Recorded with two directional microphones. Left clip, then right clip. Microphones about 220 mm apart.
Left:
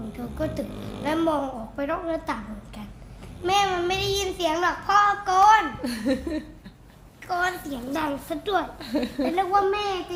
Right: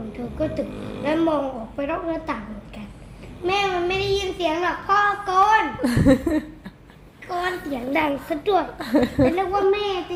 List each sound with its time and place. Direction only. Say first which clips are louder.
0.2 s a woman's voice: right 4 dB; 30° left (ahead or behind)
5.8 s a woman's voice: right 8 dB; 20° right (ahead or behind)
7.3 s a child's voice: even; 20° left (ahead or behind)
8.8 s a woman's voice: right 8 dB; 15° right (ahead or behind)
9.3 s a child's voice: right 1 dB; 30° left (ahead or behind)